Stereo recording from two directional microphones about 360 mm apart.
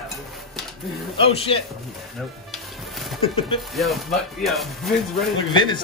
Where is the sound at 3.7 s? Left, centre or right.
Centre.